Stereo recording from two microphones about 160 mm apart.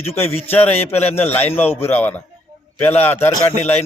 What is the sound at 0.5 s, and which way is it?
A man's voice, 15° left (ahead or behind).